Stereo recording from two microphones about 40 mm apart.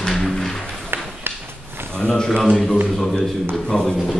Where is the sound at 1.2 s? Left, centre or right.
Right.